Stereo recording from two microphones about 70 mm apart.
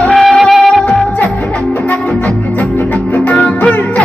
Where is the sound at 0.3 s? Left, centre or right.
Centre.